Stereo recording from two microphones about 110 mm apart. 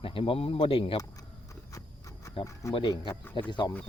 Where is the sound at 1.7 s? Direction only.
30° left (ahead or behind).